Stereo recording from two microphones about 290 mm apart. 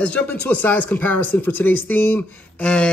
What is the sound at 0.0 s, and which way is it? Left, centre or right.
Speech, centre.